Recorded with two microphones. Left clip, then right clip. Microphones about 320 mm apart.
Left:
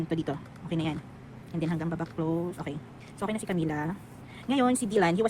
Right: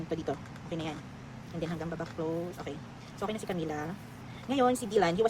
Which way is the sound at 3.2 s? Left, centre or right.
Left.